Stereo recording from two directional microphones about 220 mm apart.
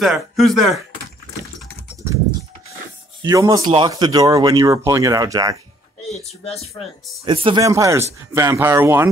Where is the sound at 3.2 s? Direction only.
15° right (ahead or behind).